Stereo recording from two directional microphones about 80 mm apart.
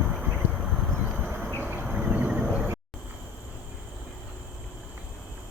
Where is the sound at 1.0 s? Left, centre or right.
Centre.